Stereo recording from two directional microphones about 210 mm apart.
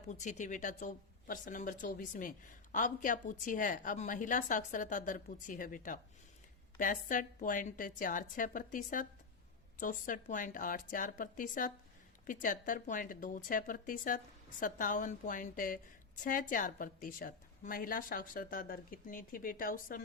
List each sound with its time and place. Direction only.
0.1 s speech: 35° left (ahead or behind)